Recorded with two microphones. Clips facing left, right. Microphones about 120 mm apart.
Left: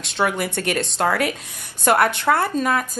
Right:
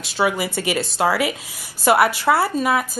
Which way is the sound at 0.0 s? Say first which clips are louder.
Right 1 dB; 5° right (ahead or behind).